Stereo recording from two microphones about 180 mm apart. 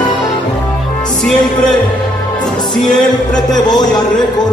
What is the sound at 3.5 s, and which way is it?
Speech, 25° left (ahead or behind).